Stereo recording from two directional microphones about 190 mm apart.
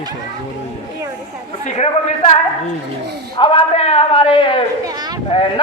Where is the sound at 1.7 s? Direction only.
35° left (ahead or behind).